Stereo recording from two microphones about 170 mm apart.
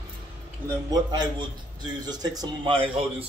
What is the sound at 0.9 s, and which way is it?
Speech, 25° right (ahead or behind).